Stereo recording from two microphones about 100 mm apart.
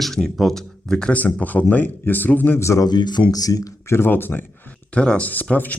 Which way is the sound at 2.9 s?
45° left (ahead or behind).